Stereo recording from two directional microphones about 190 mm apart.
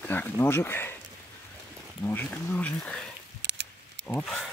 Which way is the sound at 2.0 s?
10° left (ahead or behind).